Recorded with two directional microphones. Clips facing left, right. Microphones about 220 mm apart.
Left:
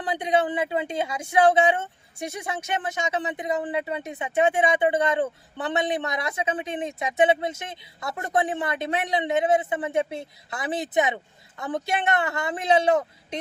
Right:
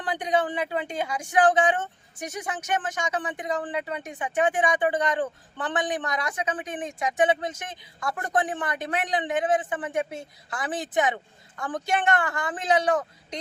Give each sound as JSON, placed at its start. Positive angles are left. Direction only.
{"t": 0.0, "sound": "speech", "side_deg": 25}